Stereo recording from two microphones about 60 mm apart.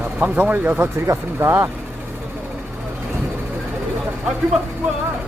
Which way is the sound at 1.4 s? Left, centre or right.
Right.